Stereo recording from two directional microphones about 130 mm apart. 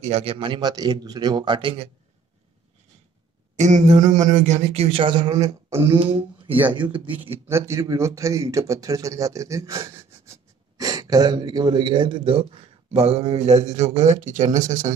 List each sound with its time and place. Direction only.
0.0 s speech: 50° right (ahead or behind)
3.5 s a man's voice: 65° right (ahead or behind); by 7.0 s 35° right (ahead or behind)
7.1 s a man's voice: 15° right (ahead or behind); by 14.9 s 70° right (ahead or behind)